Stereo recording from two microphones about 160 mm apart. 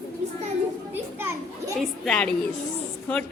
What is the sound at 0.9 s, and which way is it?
Children playing, 15° right (ahead or behind).